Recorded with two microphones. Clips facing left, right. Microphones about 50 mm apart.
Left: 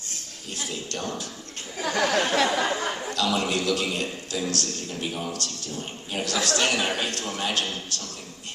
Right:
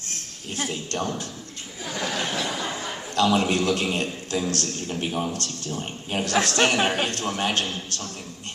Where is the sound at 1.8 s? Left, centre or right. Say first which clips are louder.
Left 5 dB; left.